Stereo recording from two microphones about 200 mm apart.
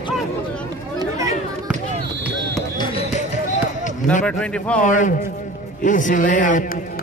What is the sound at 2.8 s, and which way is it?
Basketball bounce, 30° left (ahead or behind).